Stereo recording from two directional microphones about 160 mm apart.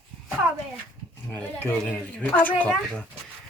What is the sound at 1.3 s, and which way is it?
Speech, 10° left (ahead or behind).